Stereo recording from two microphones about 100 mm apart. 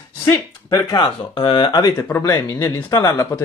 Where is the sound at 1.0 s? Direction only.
60° left (ahead or behind).